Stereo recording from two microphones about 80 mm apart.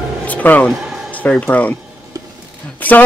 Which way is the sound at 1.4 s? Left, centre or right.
Centre.